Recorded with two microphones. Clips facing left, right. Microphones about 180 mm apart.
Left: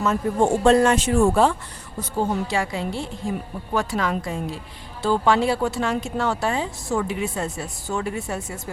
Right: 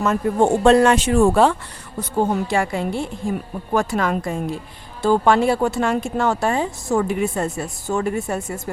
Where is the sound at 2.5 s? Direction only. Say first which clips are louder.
Right 4 dB; 50° right (ahead or behind).